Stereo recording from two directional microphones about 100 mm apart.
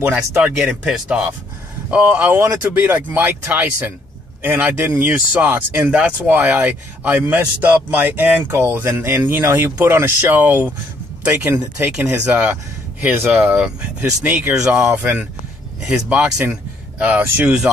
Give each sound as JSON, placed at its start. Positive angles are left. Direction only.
{"t": 0.4, "sound": "speech", "side_deg": -10}
{"t": 15.8, "sound": "speech", "side_deg": -10}